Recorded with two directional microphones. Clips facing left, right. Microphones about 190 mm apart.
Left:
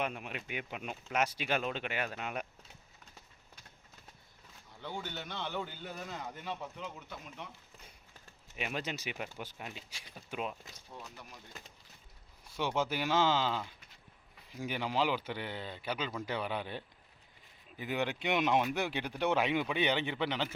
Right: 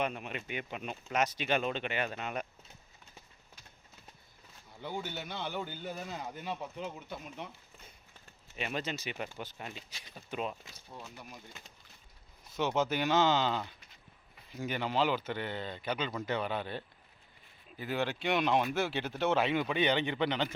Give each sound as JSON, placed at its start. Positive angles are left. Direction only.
{"t": 0.0, "sound": "speech", "side_deg": 5}
{"t": 4.8, "sound": "speech", "side_deg": -10}
{"t": 6.8, "sound": "speech", "side_deg": -25}
{"t": 8.5, "sound": "speech", "side_deg": 10}
{"t": 12.5, "sound": "speech", "side_deg": 10}